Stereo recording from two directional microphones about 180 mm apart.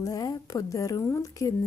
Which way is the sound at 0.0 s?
20° left (ahead or behind).